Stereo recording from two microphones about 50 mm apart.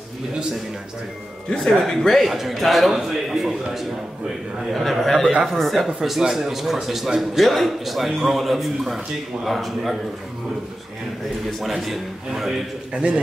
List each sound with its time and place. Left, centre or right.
1.5 s a man's voice: centre
11.6 s a man's voice: centre
12.9 s a man's voice: right